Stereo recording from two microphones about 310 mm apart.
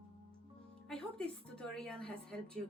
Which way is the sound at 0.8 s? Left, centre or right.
Centre.